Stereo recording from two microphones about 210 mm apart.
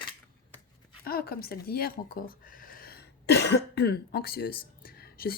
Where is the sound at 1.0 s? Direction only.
45° left (ahead or behind).